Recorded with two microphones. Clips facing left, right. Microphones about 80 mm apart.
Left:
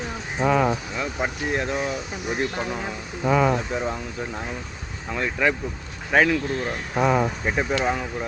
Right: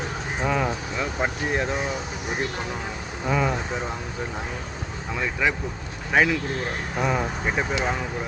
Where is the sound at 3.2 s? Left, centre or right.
Centre.